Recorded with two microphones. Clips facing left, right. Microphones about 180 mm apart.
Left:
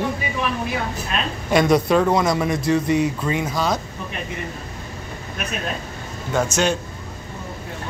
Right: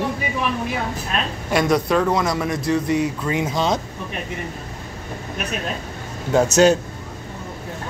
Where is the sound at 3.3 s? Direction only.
20° right (ahead or behind).